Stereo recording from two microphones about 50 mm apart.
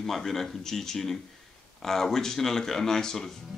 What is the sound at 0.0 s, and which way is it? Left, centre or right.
Speech, centre.